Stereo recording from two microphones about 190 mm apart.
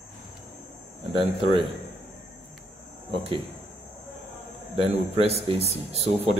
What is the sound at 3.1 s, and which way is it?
Speech, 30° right (ahead or behind).